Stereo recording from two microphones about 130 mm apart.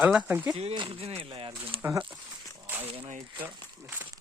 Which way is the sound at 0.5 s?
45° right (ahead or behind).